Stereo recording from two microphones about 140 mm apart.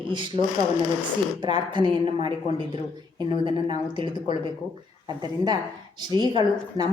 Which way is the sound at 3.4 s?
35° right (ahead or behind).